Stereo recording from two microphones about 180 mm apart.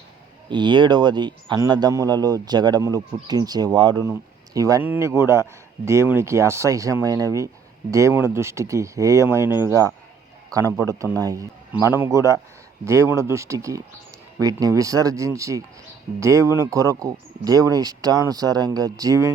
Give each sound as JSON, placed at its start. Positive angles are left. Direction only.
{"t": 0.4, "sound": "speech", "side_deg": -25}